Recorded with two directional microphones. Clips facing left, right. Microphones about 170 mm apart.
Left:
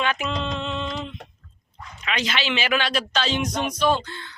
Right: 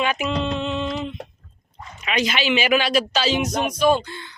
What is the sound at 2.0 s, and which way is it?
Speech, 15° right (ahead or behind).